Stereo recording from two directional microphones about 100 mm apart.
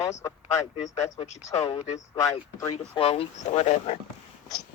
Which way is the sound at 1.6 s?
70° left (ahead or behind).